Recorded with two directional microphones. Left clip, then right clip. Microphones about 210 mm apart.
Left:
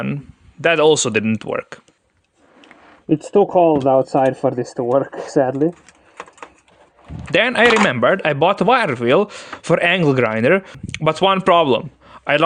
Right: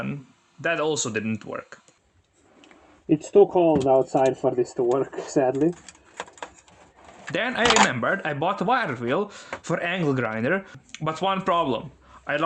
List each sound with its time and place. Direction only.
0.6 s speech: 40° left (ahead or behind)
3.7 s speech: 40° left (ahead or behind)
7.3 s speech: 40° left (ahead or behind)